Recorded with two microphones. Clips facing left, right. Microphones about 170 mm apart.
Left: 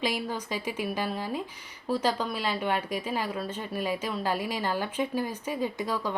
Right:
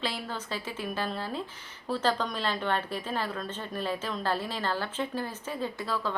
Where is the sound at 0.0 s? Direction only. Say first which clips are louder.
Left 4 dB; 15° left (ahead or behind).